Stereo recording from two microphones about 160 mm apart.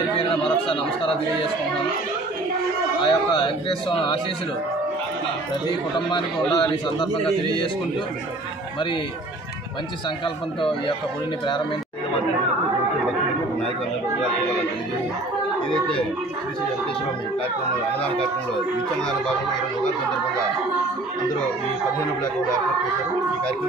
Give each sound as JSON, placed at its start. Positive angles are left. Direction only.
{"t": 0.2, "sound": "chatter", "side_deg": 35}
{"t": 3.0, "sound": "speech", "side_deg": 30}
{"t": 5.7, "sound": "a man's voice", "side_deg": 30}